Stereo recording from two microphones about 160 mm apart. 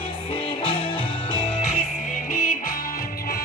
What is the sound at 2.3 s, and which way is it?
Music, 60° left (ahead or behind).